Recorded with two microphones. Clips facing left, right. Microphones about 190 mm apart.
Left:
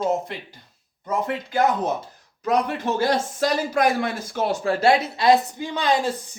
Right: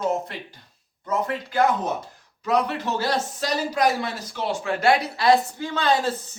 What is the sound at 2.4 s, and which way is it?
Speech, 50° left (ahead or behind).